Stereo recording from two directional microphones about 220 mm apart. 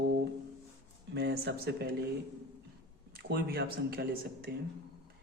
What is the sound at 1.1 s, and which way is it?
Speech, 50° right (ahead or behind).